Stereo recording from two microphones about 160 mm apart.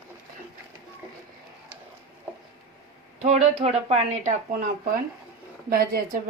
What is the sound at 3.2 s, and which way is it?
Speech, 40° right (ahead or behind).